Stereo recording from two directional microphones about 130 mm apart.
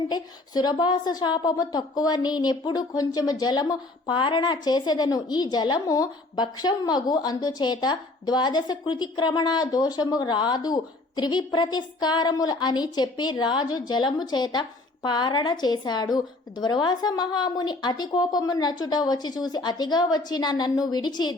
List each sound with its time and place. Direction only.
0.1 s a woman's voice: 35° left (ahead or behind)